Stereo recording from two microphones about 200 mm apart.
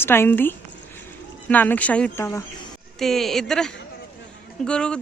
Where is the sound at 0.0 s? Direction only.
10° left (ahead or behind).